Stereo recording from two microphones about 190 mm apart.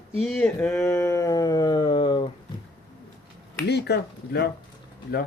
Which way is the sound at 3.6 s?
60° left (ahead or behind).